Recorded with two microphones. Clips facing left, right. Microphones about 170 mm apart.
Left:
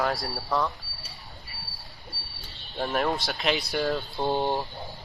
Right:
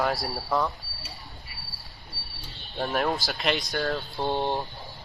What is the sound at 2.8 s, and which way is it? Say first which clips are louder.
Speech: even; centre (ahead or behind).